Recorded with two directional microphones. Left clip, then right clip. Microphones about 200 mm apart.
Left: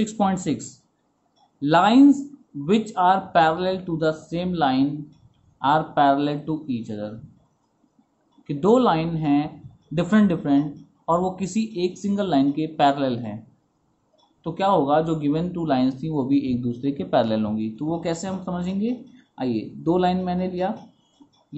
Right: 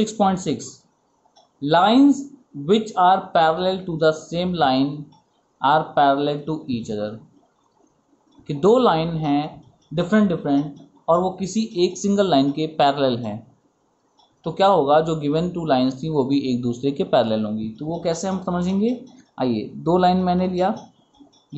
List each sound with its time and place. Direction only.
0.0 s speech: centre (ahead or behind)
8.5 s speech: centre (ahead or behind)
14.4 s speech: 5° right (ahead or behind)
18.0 s speech: 10° right (ahead or behind)